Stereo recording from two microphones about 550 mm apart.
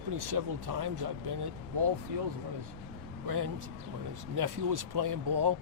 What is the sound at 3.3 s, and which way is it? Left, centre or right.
Speech, right.